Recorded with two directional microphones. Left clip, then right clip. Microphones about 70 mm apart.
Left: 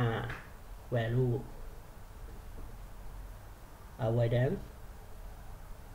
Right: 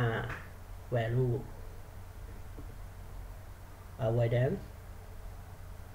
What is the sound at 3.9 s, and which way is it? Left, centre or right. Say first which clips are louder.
Speech: right 1 dB; left.